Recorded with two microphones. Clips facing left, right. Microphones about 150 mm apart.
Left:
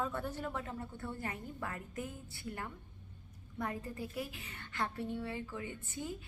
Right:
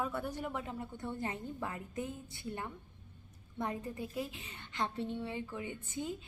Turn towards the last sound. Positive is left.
turn(degrees=-20)  # may be behind; listen again after turning